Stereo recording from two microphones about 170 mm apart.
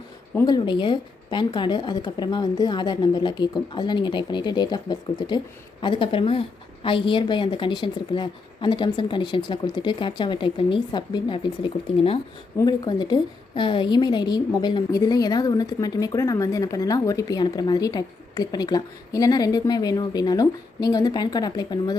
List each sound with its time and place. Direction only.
0.4 s a woman's voice: 25° left (ahead or behind)